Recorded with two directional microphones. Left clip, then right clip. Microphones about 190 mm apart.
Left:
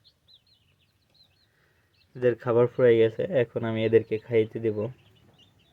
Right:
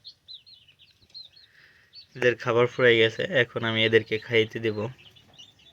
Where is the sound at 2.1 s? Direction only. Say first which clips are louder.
Even; 25° left (ahead or behind).